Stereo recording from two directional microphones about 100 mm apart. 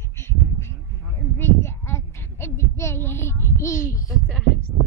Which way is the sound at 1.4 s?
25° left (ahead or behind).